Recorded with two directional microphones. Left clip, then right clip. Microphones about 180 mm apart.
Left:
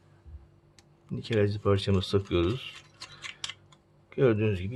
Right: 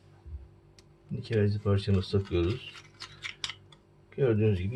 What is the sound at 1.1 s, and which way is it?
A man's voice, 50° left (ahead or behind).